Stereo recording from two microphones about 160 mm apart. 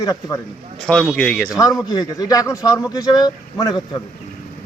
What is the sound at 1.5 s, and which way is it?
A man's voice, 20° left (ahead or behind).